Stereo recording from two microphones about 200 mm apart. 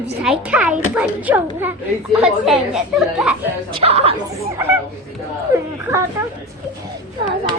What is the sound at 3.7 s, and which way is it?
Speech, 30° right (ahead or behind).